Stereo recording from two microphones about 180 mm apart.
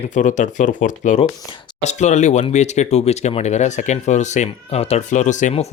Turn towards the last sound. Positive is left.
turn(degrees=40)  # may be behind; listen again after turning